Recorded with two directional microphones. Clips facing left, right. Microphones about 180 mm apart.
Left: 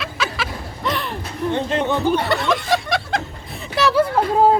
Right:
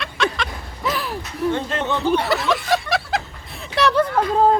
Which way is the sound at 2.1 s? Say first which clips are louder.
Even; centre (ahead or behind).